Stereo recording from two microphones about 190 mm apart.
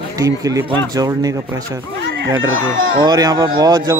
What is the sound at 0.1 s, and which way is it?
Speech, 20° right (ahead or behind).